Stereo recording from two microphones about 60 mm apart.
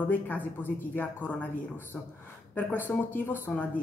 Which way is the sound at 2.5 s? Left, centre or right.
Left.